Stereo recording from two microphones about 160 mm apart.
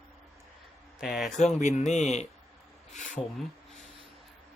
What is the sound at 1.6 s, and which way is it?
Speech, 45° left (ahead or behind).